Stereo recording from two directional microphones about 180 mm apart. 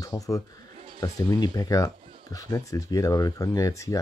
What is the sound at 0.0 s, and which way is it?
Speech, 20° left (ahead or behind).